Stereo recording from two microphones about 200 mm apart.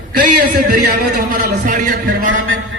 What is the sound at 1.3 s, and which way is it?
Speech, 40° right (ahead or behind).